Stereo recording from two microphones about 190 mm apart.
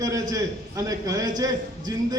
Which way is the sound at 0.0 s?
15° right (ahead or behind).